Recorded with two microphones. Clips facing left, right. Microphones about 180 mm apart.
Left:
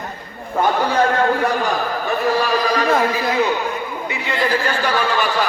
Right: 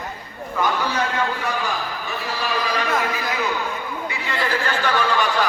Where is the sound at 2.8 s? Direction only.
35° left (ahead or behind).